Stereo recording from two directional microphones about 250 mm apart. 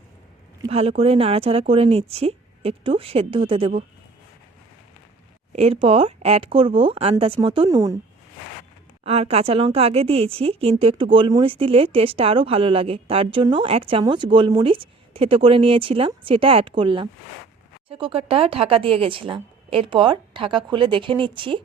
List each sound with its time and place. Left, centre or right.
0.7 s a woman's voice: right
5.5 s a woman's voice: right
9.0 s a woman's voice: right